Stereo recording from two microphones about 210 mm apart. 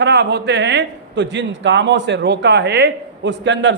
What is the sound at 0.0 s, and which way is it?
A man's voice, 55° right (ahead or behind).